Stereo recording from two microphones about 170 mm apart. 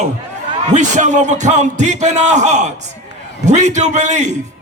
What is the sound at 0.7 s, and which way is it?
A man's voice, 45° right (ahead or behind).